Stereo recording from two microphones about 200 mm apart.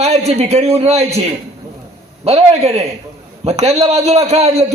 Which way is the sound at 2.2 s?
30° right (ahead or behind).